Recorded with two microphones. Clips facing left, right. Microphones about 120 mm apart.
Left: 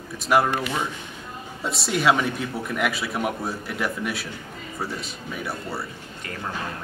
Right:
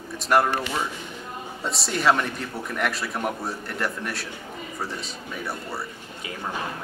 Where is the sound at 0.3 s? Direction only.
Centre (ahead or behind).